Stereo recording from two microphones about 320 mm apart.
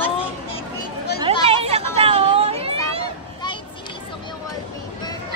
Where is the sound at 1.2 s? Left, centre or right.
Centre.